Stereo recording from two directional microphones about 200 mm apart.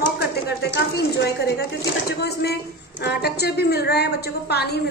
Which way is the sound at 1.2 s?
55° left (ahead or behind).